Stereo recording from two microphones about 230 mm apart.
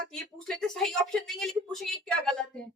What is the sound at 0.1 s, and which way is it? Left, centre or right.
Speech, centre.